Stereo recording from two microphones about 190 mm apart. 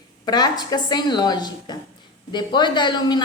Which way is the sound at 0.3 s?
20° left (ahead or behind).